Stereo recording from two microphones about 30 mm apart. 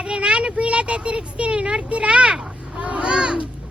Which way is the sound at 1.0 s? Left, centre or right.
Right.